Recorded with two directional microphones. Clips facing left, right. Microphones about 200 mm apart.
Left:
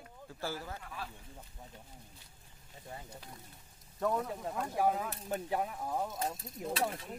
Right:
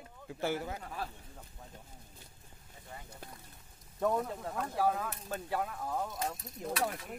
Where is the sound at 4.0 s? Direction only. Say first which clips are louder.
Right 2 dB; 5° right (ahead or behind).